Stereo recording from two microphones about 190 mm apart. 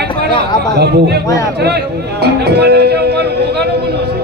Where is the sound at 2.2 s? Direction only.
60° right (ahead or behind).